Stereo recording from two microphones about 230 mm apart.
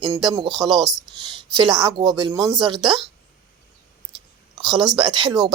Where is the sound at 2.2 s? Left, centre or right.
Centre.